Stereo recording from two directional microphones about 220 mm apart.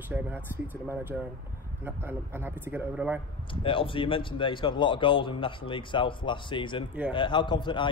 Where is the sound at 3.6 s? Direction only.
25° left (ahead or behind).